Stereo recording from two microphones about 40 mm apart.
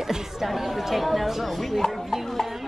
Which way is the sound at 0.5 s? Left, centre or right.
Centre.